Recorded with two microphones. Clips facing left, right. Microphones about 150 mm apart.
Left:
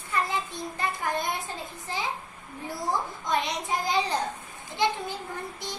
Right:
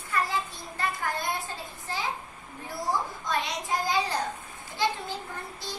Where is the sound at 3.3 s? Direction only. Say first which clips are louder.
Left 2 dB; 20° left (ahead or behind).